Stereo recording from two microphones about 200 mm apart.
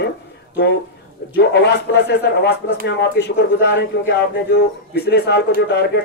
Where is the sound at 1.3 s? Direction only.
55° left (ahead or behind).